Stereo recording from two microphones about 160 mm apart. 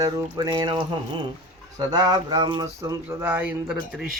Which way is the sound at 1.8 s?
25° right (ahead or behind).